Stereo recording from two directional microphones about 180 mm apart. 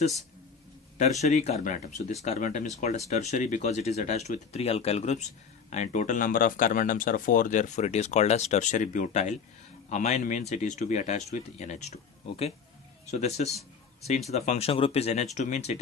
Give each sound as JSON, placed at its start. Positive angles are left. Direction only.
{"t": 0.9, "sound": "speech", "side_deg": 40}